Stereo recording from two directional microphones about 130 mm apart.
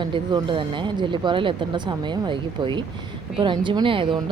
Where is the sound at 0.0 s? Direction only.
35° right (ahead or behind).